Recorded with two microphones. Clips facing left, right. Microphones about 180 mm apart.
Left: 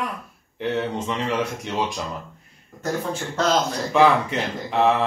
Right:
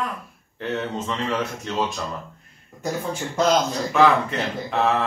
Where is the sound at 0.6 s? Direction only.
15° left (ahead or behind).